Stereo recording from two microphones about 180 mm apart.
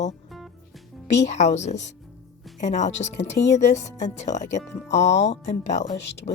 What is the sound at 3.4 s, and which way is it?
Speech, 65° left (ahead or behind).